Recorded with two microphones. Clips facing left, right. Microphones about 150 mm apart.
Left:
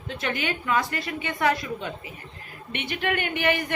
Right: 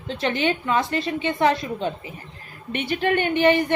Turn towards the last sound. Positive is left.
turn(degrees=-30)  # may be behind; listen again after turning